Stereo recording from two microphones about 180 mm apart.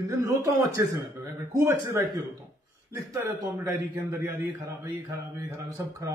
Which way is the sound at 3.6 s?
15° right (ahead or behind).